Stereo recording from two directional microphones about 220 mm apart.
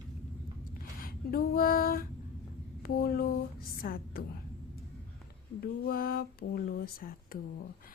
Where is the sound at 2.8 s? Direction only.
45° left (ahead or behind).